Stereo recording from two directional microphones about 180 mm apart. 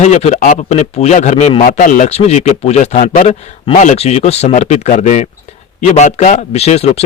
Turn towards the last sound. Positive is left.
turn(degrees=35)  # may be behind; listen again after turning